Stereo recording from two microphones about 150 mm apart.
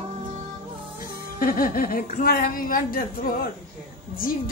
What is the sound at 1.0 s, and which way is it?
A woman's voice, 70° left (ahead or behind).